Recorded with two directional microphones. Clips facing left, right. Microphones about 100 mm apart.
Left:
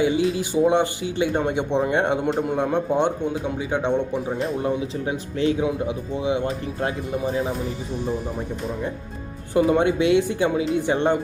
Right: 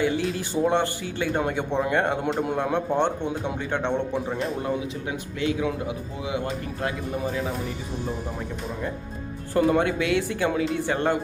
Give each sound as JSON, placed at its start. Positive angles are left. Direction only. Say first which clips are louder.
{"t": 0.0, "sound": "a man's voice", "louder": "left 4 dB", "side_deg": 15}
{"t": 2.2, "sound": "a man's voice", "louder": "left 3 dB", "side_deg": 0}
{"t": 2.7, "sound": "a man's voice", "louder": "left 2 dB", "side_deg": 15}
{"t": 5.0, "sound": "speech", "louder": "left 6 dB", "side_deg": 30}
{"t": 9.6, "sound": "speech", "louder": "left 3 dB", "side_deg": 15}